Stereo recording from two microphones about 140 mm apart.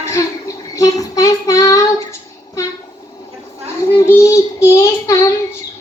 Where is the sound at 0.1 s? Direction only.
25° left (ahead or behind).